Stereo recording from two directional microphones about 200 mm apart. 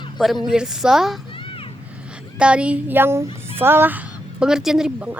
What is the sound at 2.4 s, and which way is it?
A woman's voice, 5° right (ahead or behind).